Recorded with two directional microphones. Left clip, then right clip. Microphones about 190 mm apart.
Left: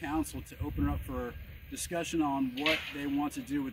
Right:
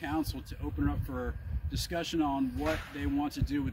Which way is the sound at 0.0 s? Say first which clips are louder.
Even; 15° right (ahead or behind).